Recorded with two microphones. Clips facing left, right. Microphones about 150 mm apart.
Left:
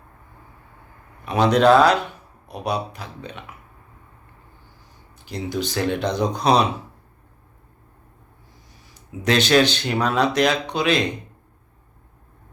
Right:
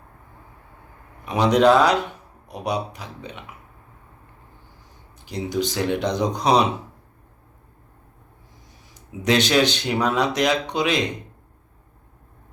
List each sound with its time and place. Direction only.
1.2 s speech: 15° right (ahead or behind)
5.2 s speech: 15° right (ahead or behind)
9.2 s speech: 15° right (ahead or behind)